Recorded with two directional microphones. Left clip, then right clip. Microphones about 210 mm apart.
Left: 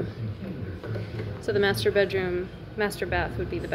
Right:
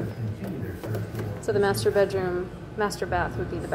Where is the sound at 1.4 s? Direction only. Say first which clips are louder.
Right 1 dB; 10° left (ahead or behind).